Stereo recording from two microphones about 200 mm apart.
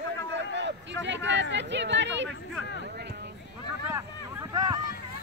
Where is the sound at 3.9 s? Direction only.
15° right (ahead or behind).